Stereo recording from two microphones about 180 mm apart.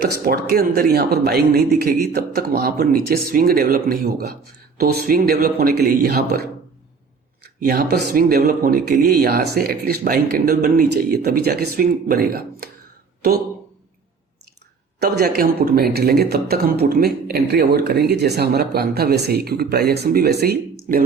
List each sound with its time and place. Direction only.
0.0 s speech: 60° right (ahead or behind)
14.9 s speech: 60° right (ahead or behind)